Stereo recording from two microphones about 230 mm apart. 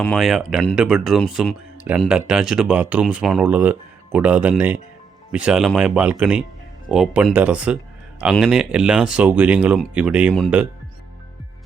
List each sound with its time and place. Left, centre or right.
0.0 s speech: centre